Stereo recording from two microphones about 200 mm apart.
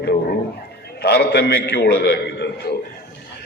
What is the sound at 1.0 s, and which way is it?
A man's voice, 55° left (ahead or behind).